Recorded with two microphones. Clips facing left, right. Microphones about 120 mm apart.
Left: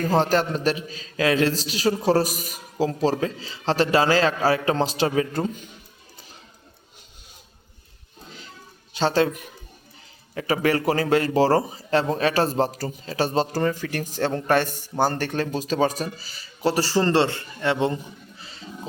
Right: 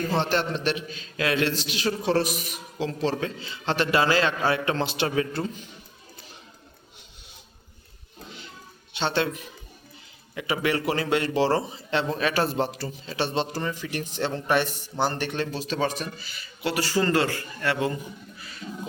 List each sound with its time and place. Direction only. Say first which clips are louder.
0.0 s a man's voice: left 4 dB; 40° left (ahead or behind)
8.9 s a man's voice: left 5 dB; 40° left (ahead or behind)
18.3 s a sound: even; 25° left (ahead or behind)